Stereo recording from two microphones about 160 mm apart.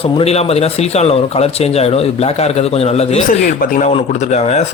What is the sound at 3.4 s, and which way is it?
Speech, 65° left (ahead or behind).